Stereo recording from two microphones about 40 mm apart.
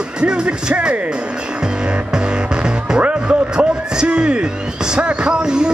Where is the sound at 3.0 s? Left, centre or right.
Right.